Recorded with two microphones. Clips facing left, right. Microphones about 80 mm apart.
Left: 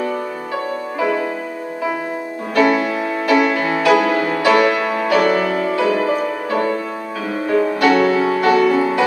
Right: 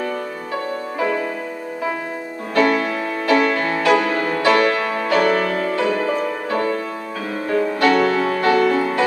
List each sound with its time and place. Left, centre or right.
2.5 s music: centre